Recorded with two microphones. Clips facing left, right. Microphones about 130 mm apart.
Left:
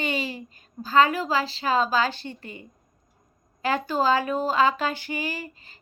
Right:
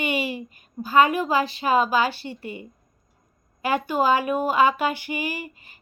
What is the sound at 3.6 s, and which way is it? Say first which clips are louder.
Speech: right 2 dB; 15° right (ahead or behind).